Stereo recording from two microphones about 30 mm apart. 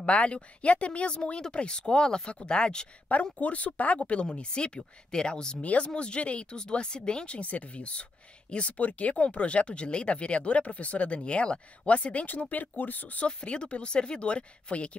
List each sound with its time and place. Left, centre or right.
0.0 s speech: left
3.3 s speech: left
4.4 s speech: left
5.6 s speech: left
5.9 s speech: left
6.6 s speech: left
7.3 s speech: left
11.1 s speech: left
12.4 s speech: left
13.2 s speech: left